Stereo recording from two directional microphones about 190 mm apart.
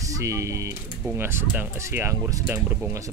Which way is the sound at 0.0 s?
15° right (ahead or behind).